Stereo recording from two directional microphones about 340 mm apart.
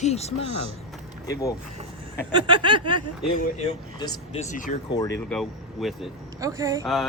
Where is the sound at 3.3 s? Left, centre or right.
Centre.